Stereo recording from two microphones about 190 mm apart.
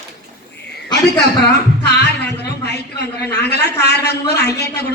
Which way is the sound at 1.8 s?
60° left (ahead or behind).